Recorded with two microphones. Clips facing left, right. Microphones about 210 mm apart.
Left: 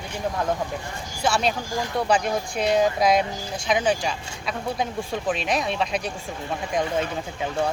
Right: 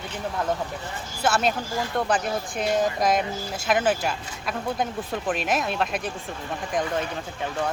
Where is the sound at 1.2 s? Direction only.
5° right (ahead or behind).